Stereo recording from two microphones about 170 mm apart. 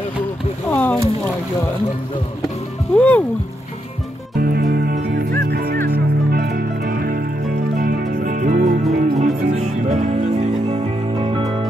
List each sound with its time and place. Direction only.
0.7 s rowboat: 10° left (ahead or behind)
2.9 s speech: 5° left (ahead or behind)
4.4 s music: 60° right (ahead or behind); by 11.5 s 30° right (ahead or behind)